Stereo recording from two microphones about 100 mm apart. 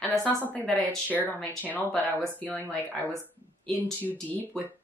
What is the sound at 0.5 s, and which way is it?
A woman's voice, 15° left (ahead or behind).